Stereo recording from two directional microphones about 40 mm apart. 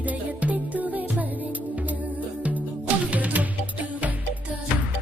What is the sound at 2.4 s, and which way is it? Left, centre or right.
Music, right.